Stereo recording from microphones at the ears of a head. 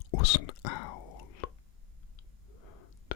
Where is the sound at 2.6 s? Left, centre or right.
Left.